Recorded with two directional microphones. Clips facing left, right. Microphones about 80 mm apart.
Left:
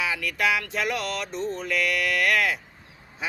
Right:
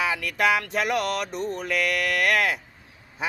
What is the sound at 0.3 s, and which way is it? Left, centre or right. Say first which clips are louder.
Speech: right 3 dB; right.